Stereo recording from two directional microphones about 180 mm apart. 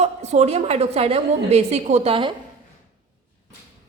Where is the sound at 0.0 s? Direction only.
40° right (ahead or behind).